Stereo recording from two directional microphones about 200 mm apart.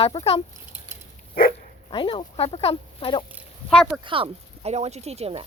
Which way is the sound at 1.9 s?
25° left (ahead or behind).